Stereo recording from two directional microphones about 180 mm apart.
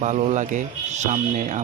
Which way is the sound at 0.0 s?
40° right (ahead or behind).